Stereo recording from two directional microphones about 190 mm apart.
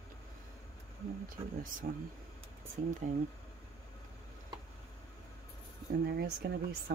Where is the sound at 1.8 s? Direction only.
50° right (ahead or behind).